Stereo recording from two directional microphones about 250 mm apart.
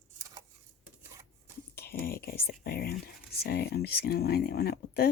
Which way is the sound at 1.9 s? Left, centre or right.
Left.